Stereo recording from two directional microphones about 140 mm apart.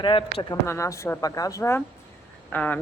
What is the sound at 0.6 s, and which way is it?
Speech, 20° left (ahead or behind).